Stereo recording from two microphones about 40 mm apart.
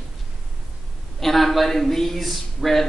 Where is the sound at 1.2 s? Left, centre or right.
Centre.